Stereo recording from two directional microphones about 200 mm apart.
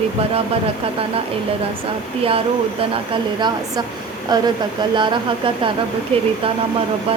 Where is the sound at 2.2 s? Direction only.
30° right (ahead or behind).